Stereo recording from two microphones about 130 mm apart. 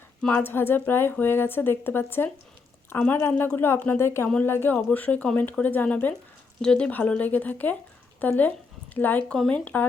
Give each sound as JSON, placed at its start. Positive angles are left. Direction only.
{"t": 0.2, "sound": "speech", "side_deg": 15}